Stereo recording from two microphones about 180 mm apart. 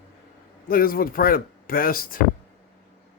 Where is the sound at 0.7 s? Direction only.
55° left (ahead or behind).